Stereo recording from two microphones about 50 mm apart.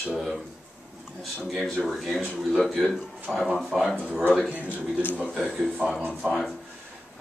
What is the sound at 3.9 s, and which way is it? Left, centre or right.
Speech, right.